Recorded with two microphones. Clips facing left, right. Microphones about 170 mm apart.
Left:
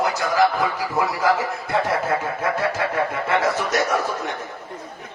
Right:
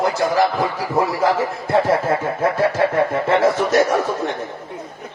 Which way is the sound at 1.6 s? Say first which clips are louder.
Right 6 dB; 30° right (ahead or behind).